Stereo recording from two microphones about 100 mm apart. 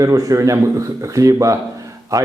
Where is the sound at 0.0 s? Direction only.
35° right (ahead or behind).